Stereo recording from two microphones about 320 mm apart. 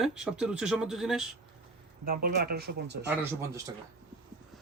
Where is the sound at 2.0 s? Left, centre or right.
Right.